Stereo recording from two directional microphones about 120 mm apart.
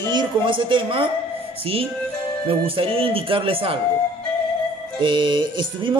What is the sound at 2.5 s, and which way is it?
Speech, 50° right (ahead or behind).